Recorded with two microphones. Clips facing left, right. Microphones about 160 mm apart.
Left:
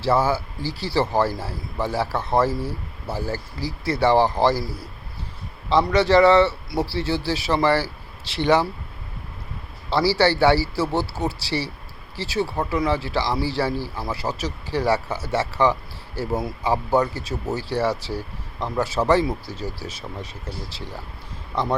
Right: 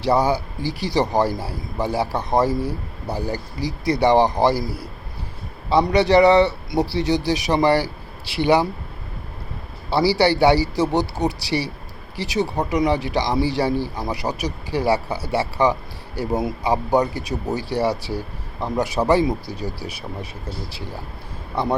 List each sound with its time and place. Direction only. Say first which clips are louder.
0.0 s speech: right 2 dB; 15° right (ahead or behind)
9.9 s speech: right 2 dB; 15° right (ahead or behind)